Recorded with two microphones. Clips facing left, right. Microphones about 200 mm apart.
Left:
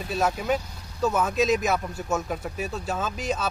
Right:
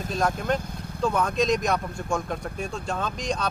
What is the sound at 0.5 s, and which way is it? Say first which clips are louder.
Speech: even; 5° left (ahead or behind).